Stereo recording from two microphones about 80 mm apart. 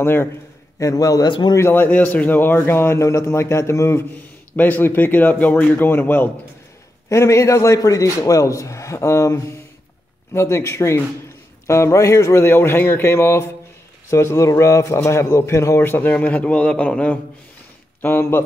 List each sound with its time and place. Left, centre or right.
0.0 s speech: left
0.7 s a man's voice: left
1.6 s a man's voice: left
4.6 s speech: left
7.1 s a man's voice: left; by 17.2 s centre
18.0 s speech: left